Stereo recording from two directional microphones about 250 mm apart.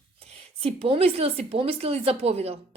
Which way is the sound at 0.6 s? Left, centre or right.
Right.